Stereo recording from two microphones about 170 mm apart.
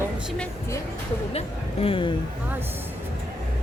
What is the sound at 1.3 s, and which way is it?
Speech, 35° left (ahead or behind).